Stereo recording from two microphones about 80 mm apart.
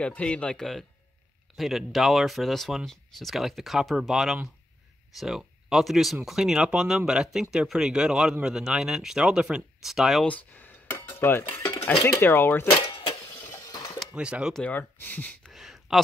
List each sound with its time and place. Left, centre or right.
0.0 s speech: centre
10.2 s cutlery: left
12.0 s speech: left
13.2 s a sound: left
14.1 s speech: centre
14.6 s speech: left
15.5 s a sound: centre